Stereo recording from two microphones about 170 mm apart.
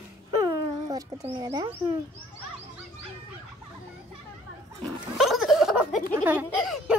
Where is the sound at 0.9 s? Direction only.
20° right (ahead or behind).